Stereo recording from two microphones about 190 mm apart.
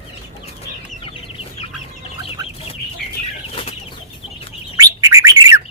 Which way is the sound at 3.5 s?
30° left (ahead or behind).